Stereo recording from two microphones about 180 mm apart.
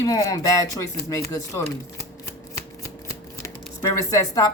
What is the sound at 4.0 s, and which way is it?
Speech, 20° left (ahead or behind).